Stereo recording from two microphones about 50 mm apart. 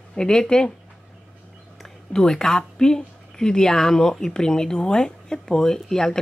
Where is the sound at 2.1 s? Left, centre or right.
Centre.